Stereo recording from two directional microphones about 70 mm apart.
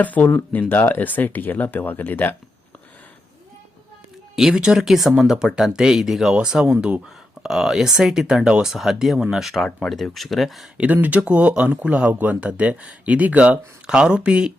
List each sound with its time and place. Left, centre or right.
0.0 s speech: left
4.4 s speech: centre
10.8 s speech: right